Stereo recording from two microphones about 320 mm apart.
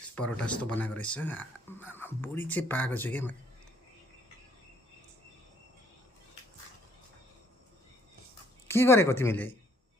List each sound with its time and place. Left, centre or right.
0.2 s speech: centre
8.6 s speech: centre